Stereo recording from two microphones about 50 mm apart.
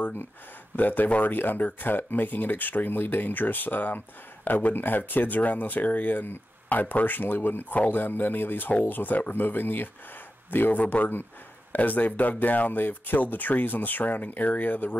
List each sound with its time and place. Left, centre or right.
0.7 s speech: left